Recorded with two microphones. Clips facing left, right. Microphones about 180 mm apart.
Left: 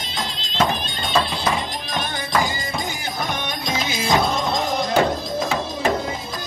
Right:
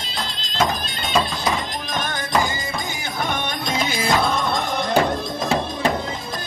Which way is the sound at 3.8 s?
55° right (ahead or behind).